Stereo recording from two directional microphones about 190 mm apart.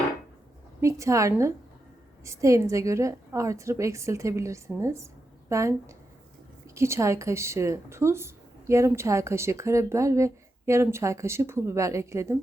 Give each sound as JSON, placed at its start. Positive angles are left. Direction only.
{"t": 0.8, "sound": "speech", "side_deg": -15}